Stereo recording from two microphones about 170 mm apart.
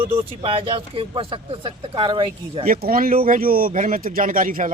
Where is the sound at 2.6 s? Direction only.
55° right (ahead or behind).